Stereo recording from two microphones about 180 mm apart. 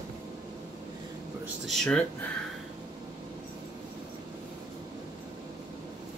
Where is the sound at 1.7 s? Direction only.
5° left (ahead or behind).